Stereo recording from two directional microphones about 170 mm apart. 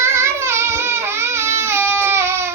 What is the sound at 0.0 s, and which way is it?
Child singing, 15° right (ahead or behind).